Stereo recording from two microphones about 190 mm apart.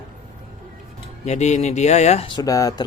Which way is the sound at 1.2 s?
35° left (ahead or behind).